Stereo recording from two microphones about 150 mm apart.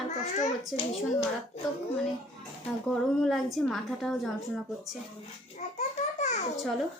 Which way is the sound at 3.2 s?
Centre (ahead or behind).